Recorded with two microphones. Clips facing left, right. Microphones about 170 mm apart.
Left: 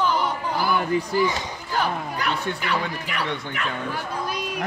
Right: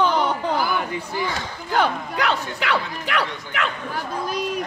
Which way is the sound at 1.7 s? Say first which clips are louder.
Right 4 dB; 70° right (ahead or behind).